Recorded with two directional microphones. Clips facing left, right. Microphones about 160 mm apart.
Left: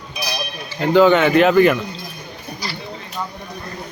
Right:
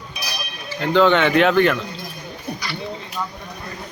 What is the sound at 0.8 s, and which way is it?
Speech, 5° left (ahead or behind).